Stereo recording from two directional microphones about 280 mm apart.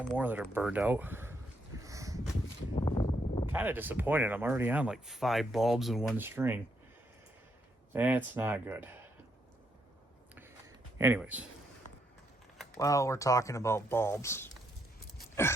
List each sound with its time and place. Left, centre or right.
0.2 s speech: centre
1.8 s boat: centre
2.7 s a sound: centre
3.5 s speech: centre
7.9 s speech: centre
10.9 s speech: centre
12.5 s speech: centre